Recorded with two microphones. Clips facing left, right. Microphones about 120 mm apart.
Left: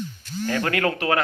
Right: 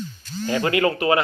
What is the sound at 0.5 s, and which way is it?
Speech, 10° right (ahead or behind).